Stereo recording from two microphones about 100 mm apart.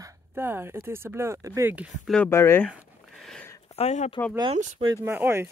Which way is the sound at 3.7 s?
90° left.